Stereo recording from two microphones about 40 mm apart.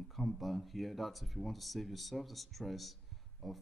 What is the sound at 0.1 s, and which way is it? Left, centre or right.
Speech, centre.